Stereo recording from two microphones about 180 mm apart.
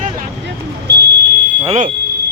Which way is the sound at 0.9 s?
70° right (ahead or behind).